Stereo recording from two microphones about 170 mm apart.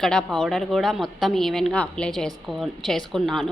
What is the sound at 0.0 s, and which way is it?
A woman's voice, 5° left (ahead or behind).